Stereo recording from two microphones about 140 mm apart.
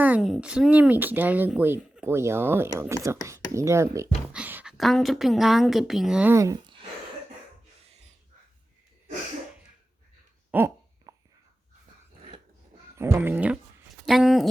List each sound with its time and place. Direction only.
0.0 s speech: 5° right (ahead or behind)
4.3 s a sound: 10° right (ahead or behind)
4.8 s speech: centre (ahead or behind)
6.3 s speech: 20° right (ahead or behind)
10.5 s a sound: 10° right (ahead or behind)
11.1 s whispering: 30° right (ahead or behind)
13.0 s speech: 15° right (ahead or behind)
14.0 s speech: centre (ahead or behind)